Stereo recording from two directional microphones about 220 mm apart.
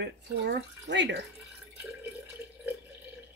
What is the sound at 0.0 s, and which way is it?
Speech, 50° right (ahead or behind).